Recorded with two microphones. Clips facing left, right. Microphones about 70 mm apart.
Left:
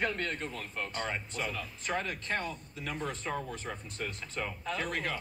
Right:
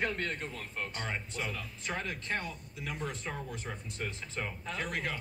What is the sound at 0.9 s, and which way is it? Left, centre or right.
A man's voice, left.